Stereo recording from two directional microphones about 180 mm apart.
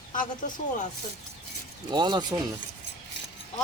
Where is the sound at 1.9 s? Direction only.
25° right (ahead or behind).